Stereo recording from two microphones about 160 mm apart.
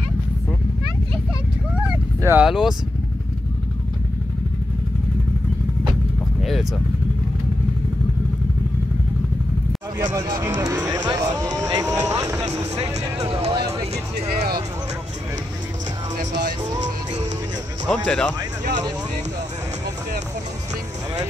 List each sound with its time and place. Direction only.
2.2 s speech: 5° right (ahead or behind)
6.4 s vehicle: centre (ahead or behind)
10.1 s speech: 25° right (ahead or behind)
10.6 s music: 20° right (ahead or behind)
12.1 s vehicle: 20° right (ahead or behind)
13.3 s music: 40° right (ahead or behind)
16.8 s music: 45° right (ahead or behind)
17.8 s speech: 5° left (ahead or behind)